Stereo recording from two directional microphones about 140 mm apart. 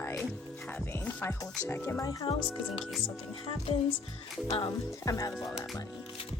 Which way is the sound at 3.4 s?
40° left (ahead or behind).